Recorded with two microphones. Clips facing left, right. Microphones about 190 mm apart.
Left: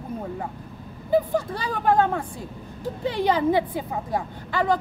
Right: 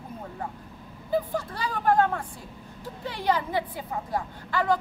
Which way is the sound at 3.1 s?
20° left (ahead or behind).